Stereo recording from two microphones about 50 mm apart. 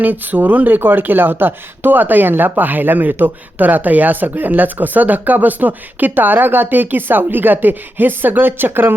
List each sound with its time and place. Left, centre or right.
0.0 s speech: right